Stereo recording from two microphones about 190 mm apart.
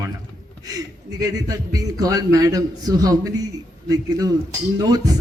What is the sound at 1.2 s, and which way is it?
A man's voice, 20° right (ahead or behind).